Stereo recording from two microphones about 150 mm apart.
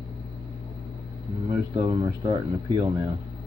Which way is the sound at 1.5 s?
25° right (ahead or behind).